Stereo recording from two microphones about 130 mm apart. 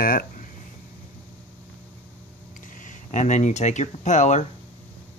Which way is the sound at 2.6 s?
85° left.